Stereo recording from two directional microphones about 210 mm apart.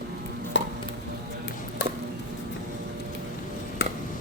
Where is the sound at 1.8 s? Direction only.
55° left (ahead or behind).